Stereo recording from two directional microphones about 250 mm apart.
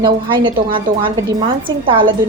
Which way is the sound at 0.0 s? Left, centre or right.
Centre.